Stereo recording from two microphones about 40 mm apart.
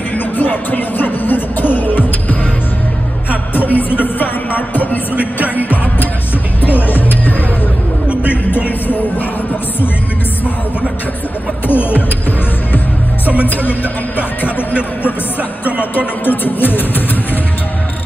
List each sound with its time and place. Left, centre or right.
0.1 s music: left
8.1 s music: right
8.6 s music: left
11.6 s music: left
16.3 s speech: left